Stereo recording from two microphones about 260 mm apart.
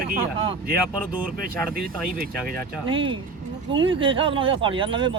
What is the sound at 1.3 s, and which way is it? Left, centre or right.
Speech, right.